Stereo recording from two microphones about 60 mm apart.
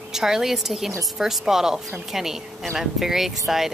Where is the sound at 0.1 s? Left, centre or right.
Centre.